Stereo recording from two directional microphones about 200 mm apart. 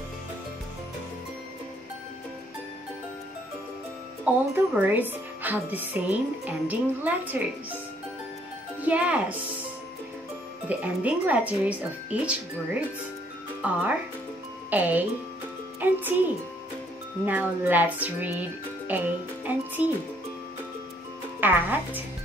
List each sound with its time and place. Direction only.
4.2 s speech: 10° right (ahead or behind)
8.8 s speech: 5° right (ahead or behind)
10.7 s speech: 5° right (ahead or behind)
17.3 s speech: 10° right (ahead or behind)
21.4 s speech: 10° right (ahead or behind)